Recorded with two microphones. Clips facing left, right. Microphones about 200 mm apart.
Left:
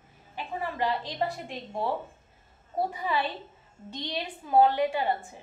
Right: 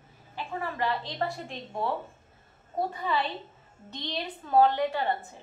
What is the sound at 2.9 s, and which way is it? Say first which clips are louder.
A woman's voice: even; 10° left (ahead or behind).